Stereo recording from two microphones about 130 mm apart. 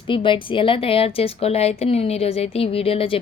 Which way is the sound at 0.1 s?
40° left (ahead or behind).